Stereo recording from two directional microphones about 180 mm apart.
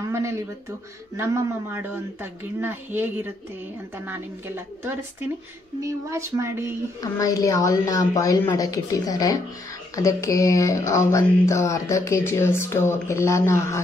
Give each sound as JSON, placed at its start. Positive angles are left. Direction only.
{"t": 1.1, "sound": "a child's voice", "side_deg": -10}
{"t": 5.8, "sound": "a child's voice", "side_deg": -15}
{"t": 7.0, "sound": "a woman's voice", "side_deg": 20}